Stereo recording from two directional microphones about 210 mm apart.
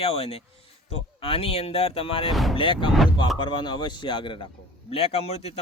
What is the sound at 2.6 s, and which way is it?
A man's voice, 25° left (ahead or behind).